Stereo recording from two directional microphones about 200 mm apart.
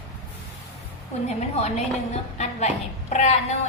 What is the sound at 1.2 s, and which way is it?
A woman's voice, 35° left (ahead or behind).